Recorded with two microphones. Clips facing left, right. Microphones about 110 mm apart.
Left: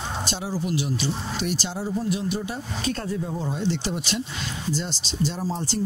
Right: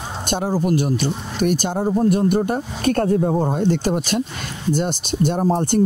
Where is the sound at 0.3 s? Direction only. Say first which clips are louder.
Right 11 dB; 50° right (ahead or behind).